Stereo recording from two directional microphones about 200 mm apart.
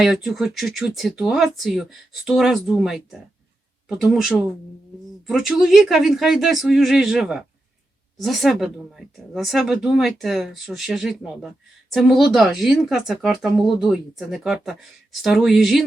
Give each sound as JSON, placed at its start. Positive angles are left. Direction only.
{"t": 0.0, "sound": "speech", "side_deg": 0}